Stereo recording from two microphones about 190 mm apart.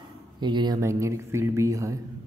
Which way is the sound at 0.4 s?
25° right (ahead or behind).